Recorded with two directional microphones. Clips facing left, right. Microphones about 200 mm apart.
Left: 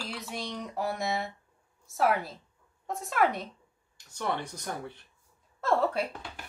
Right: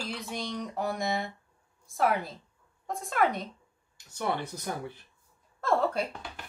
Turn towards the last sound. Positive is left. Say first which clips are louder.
# even
turn(degrees=5)  # may be behind; listen again after turning